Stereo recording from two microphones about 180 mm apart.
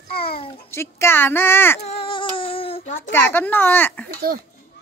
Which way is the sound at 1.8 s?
30° left (ahead or behind).